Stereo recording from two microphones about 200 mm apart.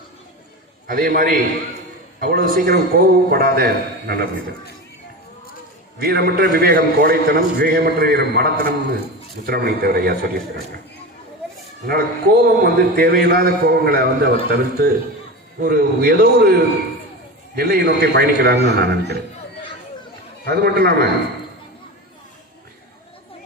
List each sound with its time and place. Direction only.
0.9 s a man's voice: 45° right (ahead or behind)
6.0 s a man's voice: 50° right (ahead or behind)
11.9 s a man's voice: 50° right (ahead or behind)
20.4 s a man's voice: 50° right (ahead or behind)